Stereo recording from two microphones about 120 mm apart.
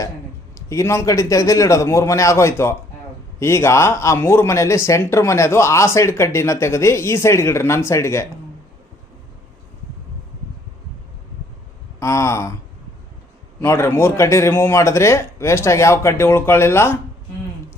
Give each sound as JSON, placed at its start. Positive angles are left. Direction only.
{"t": 0.7, "sound": "speech", "side_deg": 25}
{"t": 11.9, "sound": "speech", "side_deg": 25}
{"t": 13.6, "sound": "speech", "side_deg": 20}